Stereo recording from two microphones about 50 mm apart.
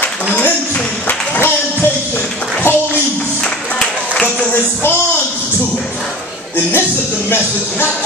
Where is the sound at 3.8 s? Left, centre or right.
Centre.